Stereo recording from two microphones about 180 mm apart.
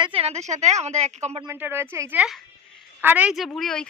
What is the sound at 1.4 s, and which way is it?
A woman's voice, 15° right (ahead or behind).